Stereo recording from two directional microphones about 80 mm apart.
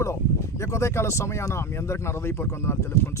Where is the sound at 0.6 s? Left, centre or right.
Left.